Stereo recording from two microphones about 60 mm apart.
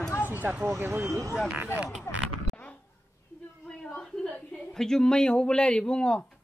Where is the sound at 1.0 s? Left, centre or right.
Right.